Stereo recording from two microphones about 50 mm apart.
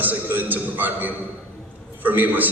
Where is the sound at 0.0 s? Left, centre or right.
Right.